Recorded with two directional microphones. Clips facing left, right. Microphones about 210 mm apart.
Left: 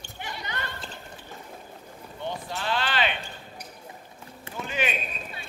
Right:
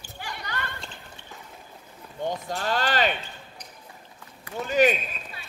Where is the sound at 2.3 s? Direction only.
45° right (ahead or behind).